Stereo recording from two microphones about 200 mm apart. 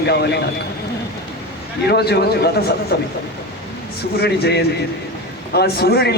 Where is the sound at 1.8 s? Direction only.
55° left (ahead or behind).